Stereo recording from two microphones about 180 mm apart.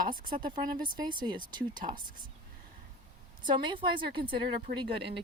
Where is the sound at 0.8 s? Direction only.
25° right (ahead or behind).